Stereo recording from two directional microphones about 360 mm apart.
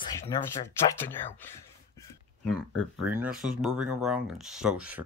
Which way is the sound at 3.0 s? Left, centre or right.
Centre.